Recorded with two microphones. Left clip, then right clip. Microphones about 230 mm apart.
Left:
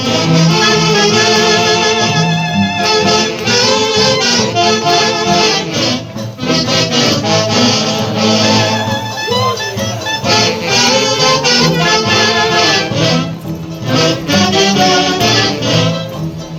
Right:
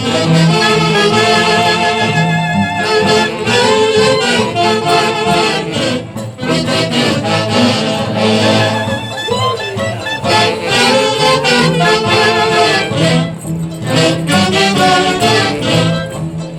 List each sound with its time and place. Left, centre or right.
0.0 s music: right
10.2 s music: right
13.9 s music: right